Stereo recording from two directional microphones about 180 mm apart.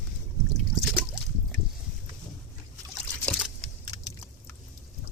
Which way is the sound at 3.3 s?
Centre (ahead or behind).